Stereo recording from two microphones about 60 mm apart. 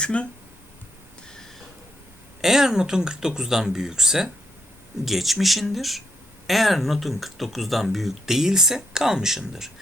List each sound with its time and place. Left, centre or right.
0.0 s speech: centre
1.3 s a sound: centre
2.4 s speech: centre